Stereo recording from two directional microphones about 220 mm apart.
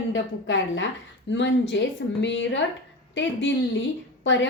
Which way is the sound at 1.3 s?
55° left (ahead or behind).